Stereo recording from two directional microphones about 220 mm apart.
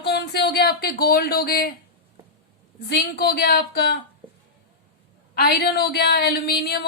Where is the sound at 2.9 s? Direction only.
45° left (ahead or behind).